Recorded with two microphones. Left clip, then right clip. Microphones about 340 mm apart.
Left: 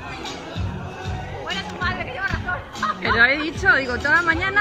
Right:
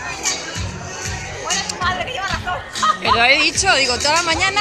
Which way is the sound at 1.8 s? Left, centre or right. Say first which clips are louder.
Right 2 dB; right.